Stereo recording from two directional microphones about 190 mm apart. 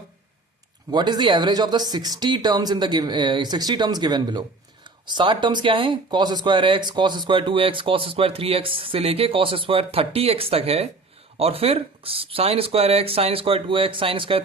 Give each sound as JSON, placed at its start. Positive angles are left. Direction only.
{"t": 0.9, "sound": "speech", "side_deg": -20}